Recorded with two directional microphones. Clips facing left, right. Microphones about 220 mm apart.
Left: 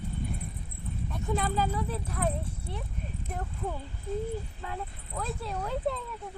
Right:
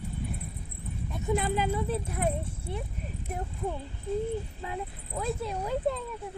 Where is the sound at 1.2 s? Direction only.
15° right (ahead or behind).